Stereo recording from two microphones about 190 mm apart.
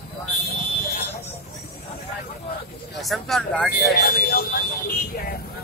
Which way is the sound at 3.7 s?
55° left (ahead or behind).